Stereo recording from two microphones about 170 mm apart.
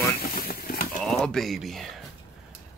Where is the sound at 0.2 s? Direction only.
60° left (ahead or behind).